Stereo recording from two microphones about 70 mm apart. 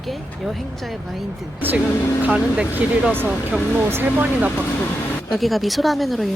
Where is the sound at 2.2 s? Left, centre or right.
Right.